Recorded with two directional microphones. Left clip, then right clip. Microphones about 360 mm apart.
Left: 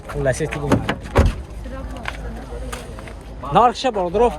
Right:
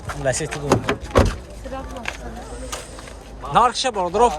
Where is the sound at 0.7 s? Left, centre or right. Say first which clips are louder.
Right 3 dB; centre.